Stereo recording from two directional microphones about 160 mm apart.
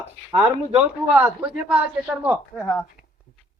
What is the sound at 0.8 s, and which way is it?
Speech, 5° right (ahead or behind).